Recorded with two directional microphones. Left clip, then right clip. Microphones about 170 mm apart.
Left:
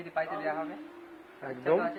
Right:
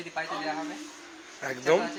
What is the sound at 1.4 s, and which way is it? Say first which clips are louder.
Speech: right 4 dB; 15° right (ahead or behind).